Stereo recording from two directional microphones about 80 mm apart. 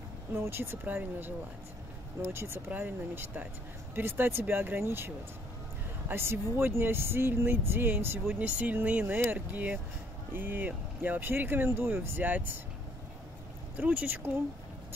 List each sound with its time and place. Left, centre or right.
0.3 s speech: right
2.3 s speech: right
13.7 s speech: centre